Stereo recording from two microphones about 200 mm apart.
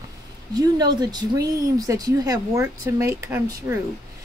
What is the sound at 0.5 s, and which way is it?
Speech, 20° right (ahead or behind).